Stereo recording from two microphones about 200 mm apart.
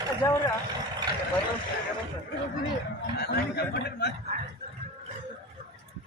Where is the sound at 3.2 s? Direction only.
55° left (ahead or behind).